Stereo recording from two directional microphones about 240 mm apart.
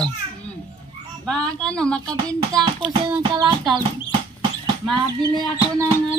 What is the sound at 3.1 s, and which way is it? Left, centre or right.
Child singing, centre.